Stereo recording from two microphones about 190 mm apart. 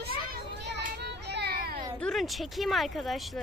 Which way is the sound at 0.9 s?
60° right (ahead or behind).